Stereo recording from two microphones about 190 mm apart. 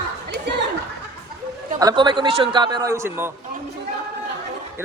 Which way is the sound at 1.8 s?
20° right (ahead or behind).